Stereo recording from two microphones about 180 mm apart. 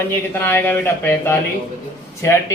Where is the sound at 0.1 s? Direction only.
10° left (ahead or behind).